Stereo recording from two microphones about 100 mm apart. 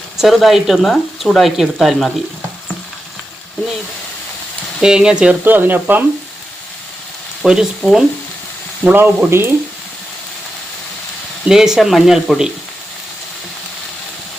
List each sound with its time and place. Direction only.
0.2 s speech: centre (ahead or behind)
4.8 s speech: 5° right (ahead or behind)
7.4 s speech: 5° right (ahead or behind)
8.8 s speech: 20° right (ahead or behind)
11.4 s speech: 5° right (ahead or behind)